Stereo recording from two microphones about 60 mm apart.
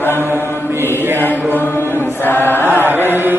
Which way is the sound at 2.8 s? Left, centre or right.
Right.